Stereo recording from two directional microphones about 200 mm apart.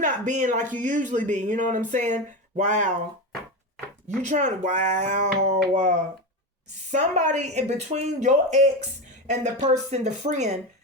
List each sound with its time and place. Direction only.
0.0 s speech: 40° right (ahead or behind)
4.2 s speech: 35° right (ahead or behind)